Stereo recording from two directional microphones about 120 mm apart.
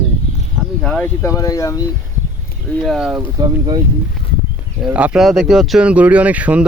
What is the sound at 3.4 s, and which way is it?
Speech, 35° right (ahead or behind).